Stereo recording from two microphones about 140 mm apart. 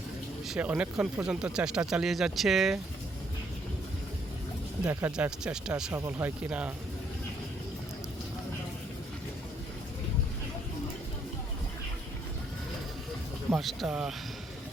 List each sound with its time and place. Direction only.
0.4 s speech: 5° right (ahead or behind)
4.9 s speech: 15° right (ahead or behind)
5.1 s speech: 5° right (ahead or behind)
5.9 s speech: 15° right (ahead or behind)
13.5 s speech: centre (ahead or behind)